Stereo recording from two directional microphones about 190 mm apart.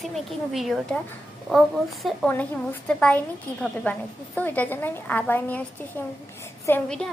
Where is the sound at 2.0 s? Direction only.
5° left (ahead or behind).